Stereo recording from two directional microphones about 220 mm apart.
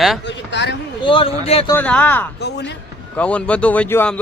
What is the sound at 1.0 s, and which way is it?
Speech, 25° left (ahead or behind).